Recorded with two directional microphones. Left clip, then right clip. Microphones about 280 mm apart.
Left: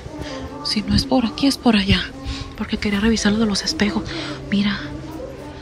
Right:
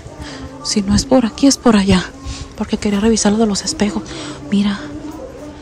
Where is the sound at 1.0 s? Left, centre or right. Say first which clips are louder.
Right 8 dB; right.